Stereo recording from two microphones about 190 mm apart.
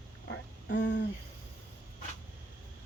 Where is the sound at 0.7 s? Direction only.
65° left (ahead or behind).